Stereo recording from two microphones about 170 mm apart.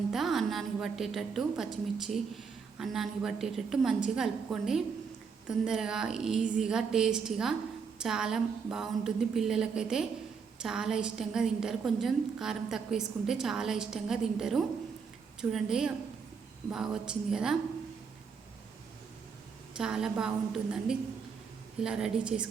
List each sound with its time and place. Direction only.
0.1 s a woman's voice: centre (ahead or behind)
19.7 s a woman's voice: 5° right (ahead or behind)